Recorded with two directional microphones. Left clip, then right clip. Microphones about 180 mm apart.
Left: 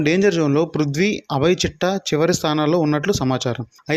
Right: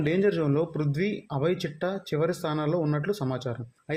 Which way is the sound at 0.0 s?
25° left (ahead or behind).